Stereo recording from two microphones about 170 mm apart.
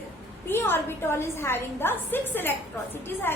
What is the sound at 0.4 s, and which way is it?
A woman's voice, 15° left (ahead or behind).